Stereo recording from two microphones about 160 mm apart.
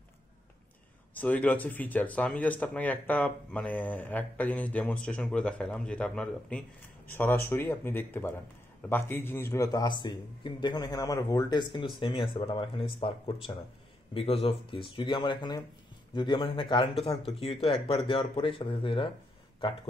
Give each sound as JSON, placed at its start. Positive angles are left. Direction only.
{"t": 1.1, "sound": "speech", "side_deg": 10}